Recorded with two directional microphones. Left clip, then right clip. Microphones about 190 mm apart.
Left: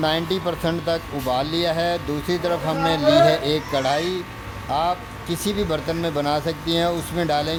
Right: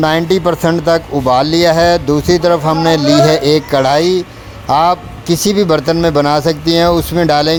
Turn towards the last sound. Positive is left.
turn(degrees=-40)  # may be behind; listen again after turning